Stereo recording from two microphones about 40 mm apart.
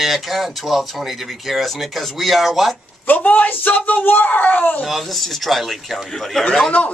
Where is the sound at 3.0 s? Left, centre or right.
Left.